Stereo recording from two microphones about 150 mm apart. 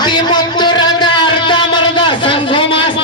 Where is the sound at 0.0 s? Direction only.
30° left (ahead or behind).